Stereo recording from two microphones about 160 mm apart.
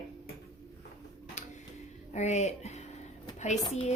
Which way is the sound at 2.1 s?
45° left (ahead or behind).